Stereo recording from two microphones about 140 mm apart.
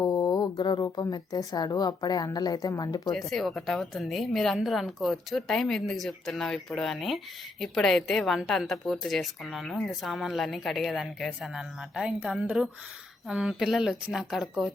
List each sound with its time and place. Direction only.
0.0 s speech: 25° left (ahead or behind)
3.1 s a woman's voice: centre (ahead or behind)